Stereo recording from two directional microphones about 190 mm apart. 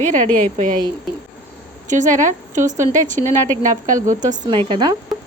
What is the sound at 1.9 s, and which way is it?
A woman's voice, 40° right (ahead or behind).